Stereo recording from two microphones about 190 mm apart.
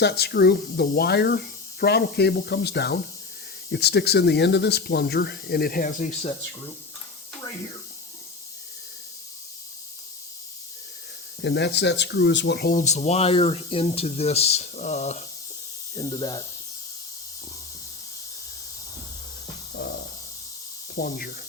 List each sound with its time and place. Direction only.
0.0 s speech: 55° left (ahead or behind)
11.4 s speech: 65° left (ahead or behind); by 15.2 s 35° left (ahead or behind)
16.0 s speech: 20° left (ahead or behind)
20.9 s speech: 50° left (ahead or behind)